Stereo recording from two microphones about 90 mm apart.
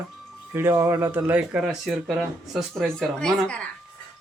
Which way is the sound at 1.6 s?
10° right (ahead or behind).